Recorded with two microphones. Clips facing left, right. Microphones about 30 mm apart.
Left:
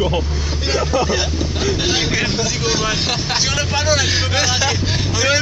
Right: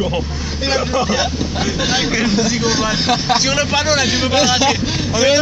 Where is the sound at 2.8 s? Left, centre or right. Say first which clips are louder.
Right 3 dB; right.